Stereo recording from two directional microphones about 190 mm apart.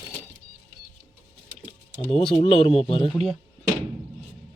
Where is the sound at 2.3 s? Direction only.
30° left (ahead or behind).